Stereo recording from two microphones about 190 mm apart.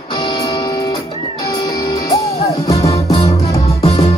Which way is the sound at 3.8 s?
30° left (ahead or behind).